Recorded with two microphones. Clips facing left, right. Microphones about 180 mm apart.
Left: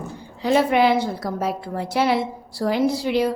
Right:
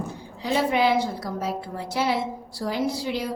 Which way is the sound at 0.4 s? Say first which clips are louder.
Left 5 dB; 60° left (ahead or behind).